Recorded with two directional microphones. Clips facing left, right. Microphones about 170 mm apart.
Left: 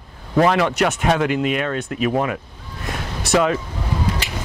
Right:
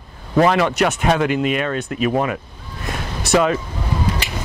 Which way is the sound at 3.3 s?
10° right (ahead or behind).